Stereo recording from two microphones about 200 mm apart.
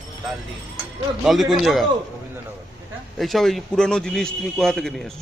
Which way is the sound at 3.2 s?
Centre (ahead or behind).